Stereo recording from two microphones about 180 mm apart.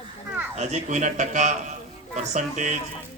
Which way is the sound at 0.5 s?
40° right (ahead or behind).